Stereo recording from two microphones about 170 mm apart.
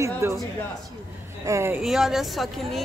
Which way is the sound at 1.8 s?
Centre (ahead or behind).